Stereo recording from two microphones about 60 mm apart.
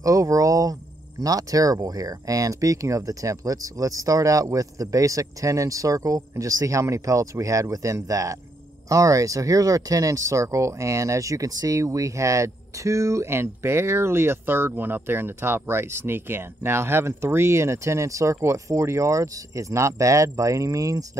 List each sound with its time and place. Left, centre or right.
0.0 s cricket: right
1.2 s speech: right